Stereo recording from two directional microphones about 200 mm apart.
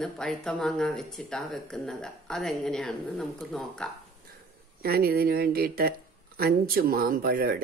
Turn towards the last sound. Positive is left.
turn(degrees=-45)  # may be behind; listen again after turning